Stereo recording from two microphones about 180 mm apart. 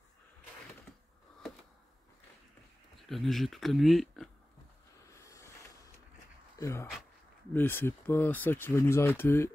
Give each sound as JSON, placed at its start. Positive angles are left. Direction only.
{"t": 3.1, "sound": "speech", "side_deg": 0}
{"t": 5.1, "sound": "a sound", "side_deg": 15}
{"t": 6.6, "sound": "speech", "side_deg": 15}